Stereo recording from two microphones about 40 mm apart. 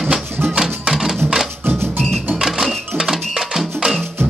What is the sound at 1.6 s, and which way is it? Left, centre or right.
Music, right.